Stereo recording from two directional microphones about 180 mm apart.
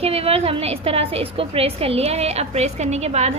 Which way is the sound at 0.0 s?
35° right (ahead or behind).